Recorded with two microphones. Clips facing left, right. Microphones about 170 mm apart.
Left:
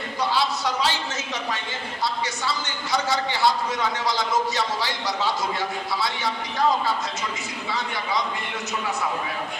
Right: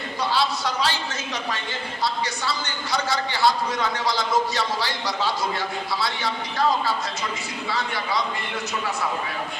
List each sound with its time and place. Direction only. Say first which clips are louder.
0.3 s a man's voice: right 1 dB; 20° left (ahead or behind)
2.6 s a man's voice: left 2 dB; 20° left (ahead or behind)